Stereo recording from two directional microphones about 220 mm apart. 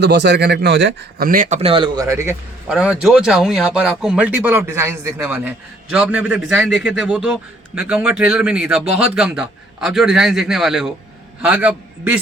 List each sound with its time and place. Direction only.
0.0 s speech: 50° right (ahead or behind)
1.3 s a man's voice: 35° right (ahead or behind); by 12.2 s 5° right (ahead or behind)